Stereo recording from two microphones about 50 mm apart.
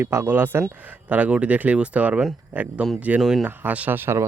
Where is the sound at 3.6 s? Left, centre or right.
Right.